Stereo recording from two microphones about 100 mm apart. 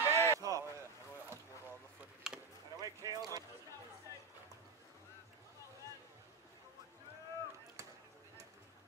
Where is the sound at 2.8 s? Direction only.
35° right (ahead or behind).